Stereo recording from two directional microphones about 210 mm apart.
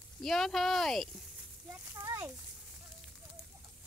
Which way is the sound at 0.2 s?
Centre (ahead or behind).